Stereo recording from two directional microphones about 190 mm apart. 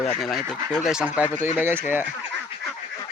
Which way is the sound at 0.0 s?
Centre (ahead or behind).